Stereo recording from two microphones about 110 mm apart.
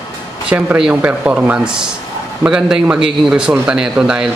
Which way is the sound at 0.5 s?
10° right (ahead or behind).